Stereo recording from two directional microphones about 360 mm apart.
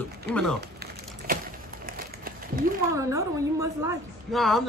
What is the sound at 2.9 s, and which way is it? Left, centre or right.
A woman's voice, centre.